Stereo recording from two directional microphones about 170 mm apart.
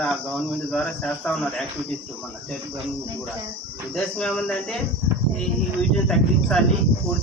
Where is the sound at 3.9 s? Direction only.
5° left (ahead or behind).